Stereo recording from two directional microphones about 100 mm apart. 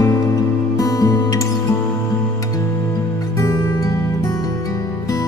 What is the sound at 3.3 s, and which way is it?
Music, 30° left (ahead or behind).